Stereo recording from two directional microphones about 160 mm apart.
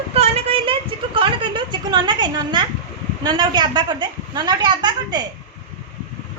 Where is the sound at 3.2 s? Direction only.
25° right (ahead or behind).